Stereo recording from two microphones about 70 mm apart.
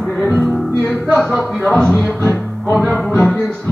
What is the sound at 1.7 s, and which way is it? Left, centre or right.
Music, centre.